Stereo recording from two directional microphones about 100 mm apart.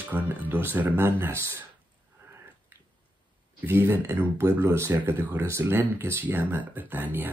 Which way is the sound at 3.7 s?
25° right (ahead or behind).